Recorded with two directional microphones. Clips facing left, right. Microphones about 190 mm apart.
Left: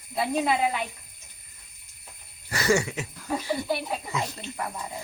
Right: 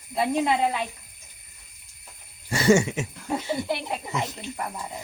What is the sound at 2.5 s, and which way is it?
Speech, 25° right (ahead or behind).